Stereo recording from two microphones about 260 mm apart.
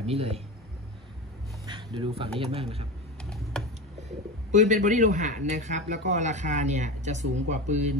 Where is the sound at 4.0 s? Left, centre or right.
Right.